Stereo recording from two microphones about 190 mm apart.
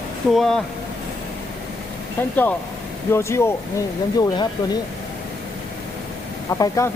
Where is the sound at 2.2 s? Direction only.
10° left (ahead or behind).